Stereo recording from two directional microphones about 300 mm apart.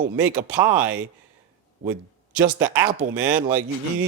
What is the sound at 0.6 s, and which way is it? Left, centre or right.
Speech, right.